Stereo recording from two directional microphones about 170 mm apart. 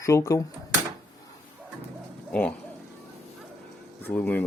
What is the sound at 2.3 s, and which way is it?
Speech, 5° left (ahead or behind).